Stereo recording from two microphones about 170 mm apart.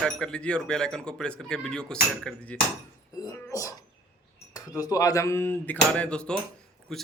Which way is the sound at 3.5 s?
20° left (ahead or behind).